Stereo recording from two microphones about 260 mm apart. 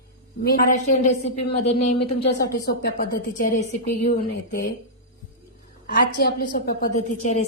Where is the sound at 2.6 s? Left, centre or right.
Left.